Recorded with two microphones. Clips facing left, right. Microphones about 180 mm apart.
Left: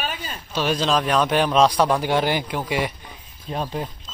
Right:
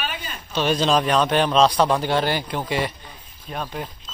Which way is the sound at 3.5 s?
25° left (ahead or behind).